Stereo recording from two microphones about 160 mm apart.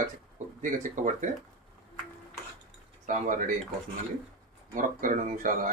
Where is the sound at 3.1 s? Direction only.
55° right (ahead or behind).